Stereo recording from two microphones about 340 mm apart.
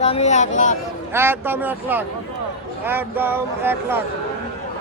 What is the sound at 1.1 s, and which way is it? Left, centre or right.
A man's voice, centre.